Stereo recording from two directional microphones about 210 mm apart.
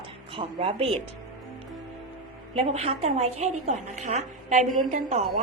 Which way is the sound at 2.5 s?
30° right (ahead or behind).